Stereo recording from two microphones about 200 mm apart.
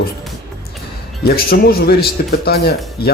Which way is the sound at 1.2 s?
50° left (ahead or behind).